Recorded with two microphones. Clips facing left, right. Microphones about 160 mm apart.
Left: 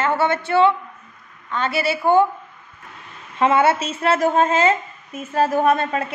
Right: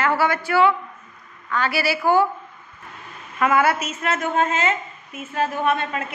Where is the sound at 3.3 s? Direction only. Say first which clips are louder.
Left 2 dB; 25° left (ahead or behind).